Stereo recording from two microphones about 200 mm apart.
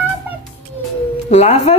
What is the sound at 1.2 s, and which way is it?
Speech, 35° left (ahead or behind).